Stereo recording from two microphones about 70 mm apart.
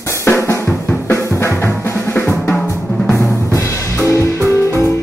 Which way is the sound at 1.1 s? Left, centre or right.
Left.